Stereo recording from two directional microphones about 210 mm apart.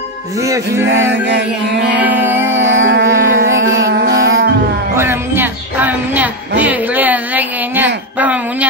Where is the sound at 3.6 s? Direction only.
60° right (ahead or behind).